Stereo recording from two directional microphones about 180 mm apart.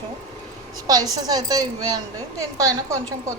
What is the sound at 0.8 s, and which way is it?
A woman's voice, 20° right (ahead or behind).